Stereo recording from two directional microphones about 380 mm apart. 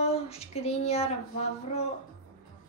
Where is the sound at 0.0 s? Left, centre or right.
Centre.